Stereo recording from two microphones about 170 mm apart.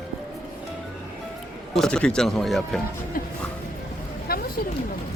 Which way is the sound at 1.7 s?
5° left (ahead or behind).